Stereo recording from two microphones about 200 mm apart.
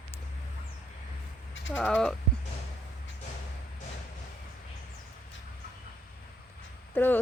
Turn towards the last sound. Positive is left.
turn(degrees=10)  # may be behind; listen again after turning